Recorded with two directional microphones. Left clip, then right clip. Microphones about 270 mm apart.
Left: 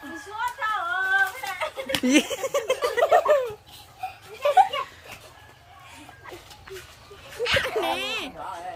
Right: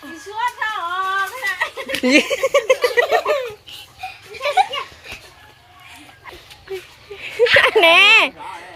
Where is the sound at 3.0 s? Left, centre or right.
Left.